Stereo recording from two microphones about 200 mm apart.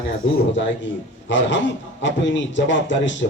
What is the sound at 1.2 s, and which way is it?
Speech, 65° left (ahead or behind).